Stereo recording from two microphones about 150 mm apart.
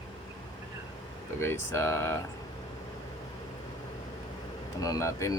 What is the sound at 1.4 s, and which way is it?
Speech, 15° left (ahead or behind).